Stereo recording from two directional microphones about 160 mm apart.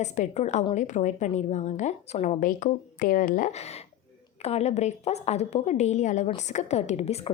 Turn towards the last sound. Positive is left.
turn(degrees=40)  # may be behind; listen again after turning